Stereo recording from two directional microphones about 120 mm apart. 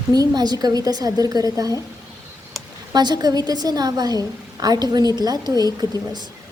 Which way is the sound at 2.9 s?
35° right (ahead or behind).